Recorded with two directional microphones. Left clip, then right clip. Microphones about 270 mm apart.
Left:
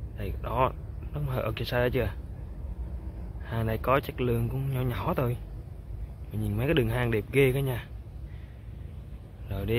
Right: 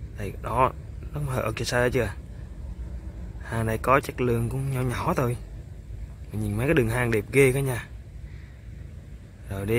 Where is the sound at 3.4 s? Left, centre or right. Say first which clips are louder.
Right 4 dB; centre.